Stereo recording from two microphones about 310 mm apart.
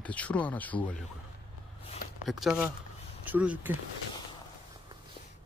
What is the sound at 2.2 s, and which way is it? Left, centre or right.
Speech, centre.